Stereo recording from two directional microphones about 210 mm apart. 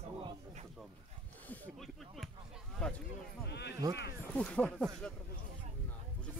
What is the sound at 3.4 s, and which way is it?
Speech, 55° left (ahead or behind).